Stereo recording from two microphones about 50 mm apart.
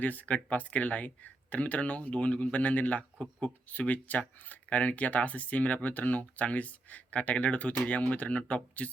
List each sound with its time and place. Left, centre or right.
0.0 s speech: left